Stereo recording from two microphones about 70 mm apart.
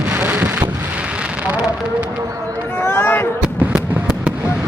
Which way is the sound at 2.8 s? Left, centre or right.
Left.